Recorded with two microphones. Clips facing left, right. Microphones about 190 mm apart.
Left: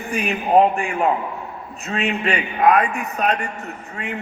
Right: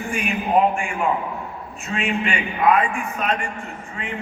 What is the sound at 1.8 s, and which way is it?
A man's voice, 40° left (ahead or behind).